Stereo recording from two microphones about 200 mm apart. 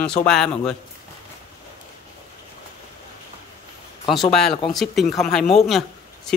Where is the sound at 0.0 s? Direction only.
5° left (ahead or behind).